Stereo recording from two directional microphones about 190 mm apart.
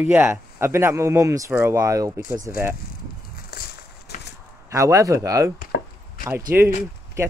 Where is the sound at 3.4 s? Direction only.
55° left (ahead or behind).